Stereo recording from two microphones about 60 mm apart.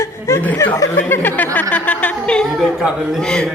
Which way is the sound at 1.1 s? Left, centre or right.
Left.